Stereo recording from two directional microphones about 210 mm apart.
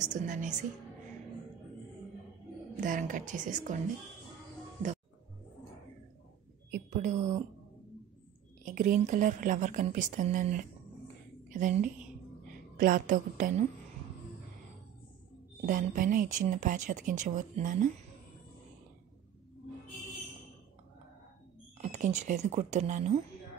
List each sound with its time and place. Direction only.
0.0 s speech: 35° right (ahead or behind)
2.8 s speech: 40° right (ahead or behind)
6.7 s a woman's voice: 40° right (ahead or behind)
8.6 s speech: 40° right (ahead or behind)
15.6 s speech: 40° right (ahead or behind)
21.7 s speech: 35° right (ahead or behind)